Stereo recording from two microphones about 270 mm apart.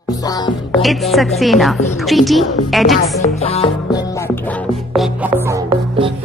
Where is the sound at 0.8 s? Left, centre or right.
Centre.